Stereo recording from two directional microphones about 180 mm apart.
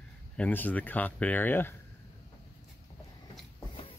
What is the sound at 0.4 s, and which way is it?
Speech, 10° left (ahead or behind).